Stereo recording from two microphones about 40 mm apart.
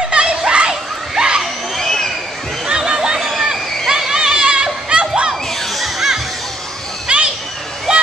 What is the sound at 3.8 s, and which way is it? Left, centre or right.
Children playing, centre.